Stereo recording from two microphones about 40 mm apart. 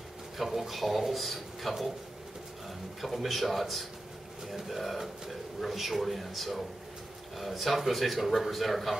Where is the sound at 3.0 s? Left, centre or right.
Centre.